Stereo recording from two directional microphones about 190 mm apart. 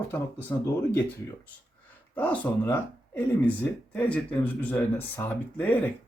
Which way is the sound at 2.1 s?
10° left (ahead or behind).